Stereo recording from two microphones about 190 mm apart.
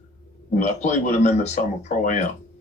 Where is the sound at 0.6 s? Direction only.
40° left (ahead or behind).